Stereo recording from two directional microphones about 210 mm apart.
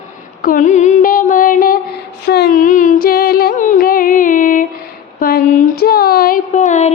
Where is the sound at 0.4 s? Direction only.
35° left (ahead or behind).